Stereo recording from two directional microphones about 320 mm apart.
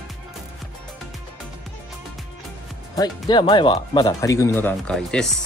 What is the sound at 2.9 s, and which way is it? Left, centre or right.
Speech, centre.